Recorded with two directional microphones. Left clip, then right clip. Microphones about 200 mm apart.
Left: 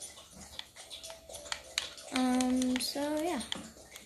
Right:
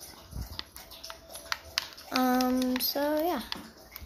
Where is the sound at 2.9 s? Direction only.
25° left (ahead or behind).